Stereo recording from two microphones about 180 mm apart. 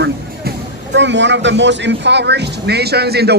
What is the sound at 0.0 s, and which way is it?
Speech, 70° right (ahead or behind).